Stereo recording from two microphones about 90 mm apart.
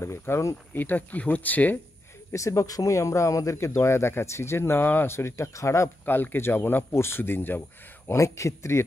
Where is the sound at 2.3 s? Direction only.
35° left (ahead or behind).